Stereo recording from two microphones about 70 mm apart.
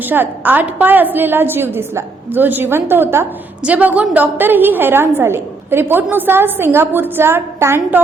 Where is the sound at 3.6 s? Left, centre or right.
Right.